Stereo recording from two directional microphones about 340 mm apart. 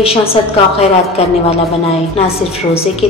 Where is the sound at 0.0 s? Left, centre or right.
Centre.